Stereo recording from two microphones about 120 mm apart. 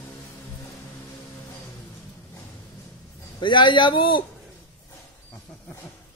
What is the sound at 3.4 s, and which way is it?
Speech, 40° left (ahead or behind).